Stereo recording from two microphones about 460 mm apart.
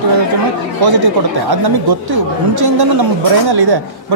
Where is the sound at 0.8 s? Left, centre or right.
Right.